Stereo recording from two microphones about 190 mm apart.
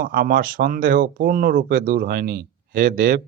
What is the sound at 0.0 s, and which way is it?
A man's voice, 50° right (ahead or behind).